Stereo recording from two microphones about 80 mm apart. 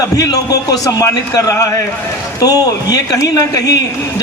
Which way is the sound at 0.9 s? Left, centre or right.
Left.